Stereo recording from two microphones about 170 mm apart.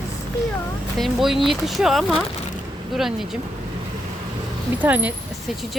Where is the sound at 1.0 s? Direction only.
Centre (ahead or behind).